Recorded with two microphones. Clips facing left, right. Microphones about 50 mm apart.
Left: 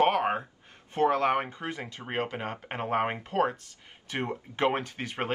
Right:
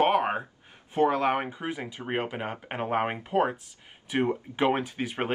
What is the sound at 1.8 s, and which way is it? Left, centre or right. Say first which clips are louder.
Speech: right 1 dB; centre.